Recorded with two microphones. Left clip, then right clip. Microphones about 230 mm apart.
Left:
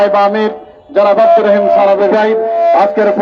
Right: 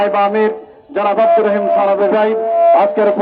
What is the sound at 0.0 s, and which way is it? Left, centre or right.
Music, left.